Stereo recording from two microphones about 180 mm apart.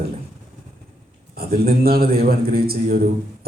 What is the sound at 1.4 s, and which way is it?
A man's voice, 55° right (ahead or behind).